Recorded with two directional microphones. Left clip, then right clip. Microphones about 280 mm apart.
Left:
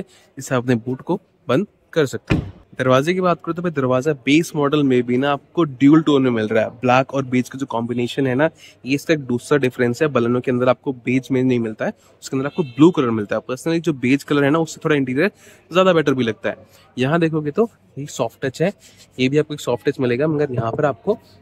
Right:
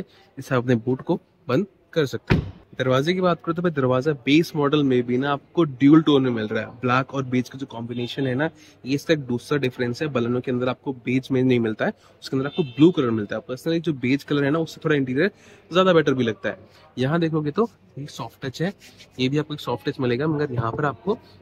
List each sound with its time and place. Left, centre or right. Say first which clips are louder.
0.5 s speech: left 2 dB; centre